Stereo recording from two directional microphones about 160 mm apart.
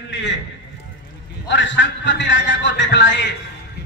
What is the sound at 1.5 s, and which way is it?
A man's voice, 90° left.